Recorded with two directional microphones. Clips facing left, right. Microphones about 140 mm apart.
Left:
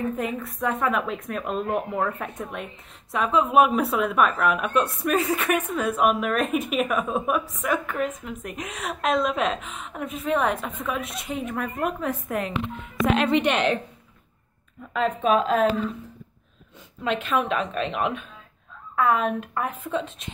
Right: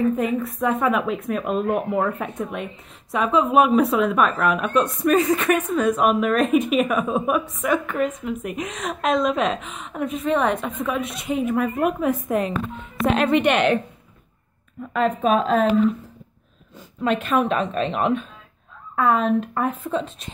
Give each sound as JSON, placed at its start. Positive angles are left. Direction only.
{"t": 0.1, "sound": "speech", "side_deg": 0}
{"t": 12.3, "sound": "speech", "side_deg": -25}
{"t": 13.1, "sound": "a woman's voice", "side_deg": -50}
{"t": 14.9, "sound": "speech", "side_deg": -45}
{"t": 17.0, "sound": "a woman's voice", "side_deg": -45}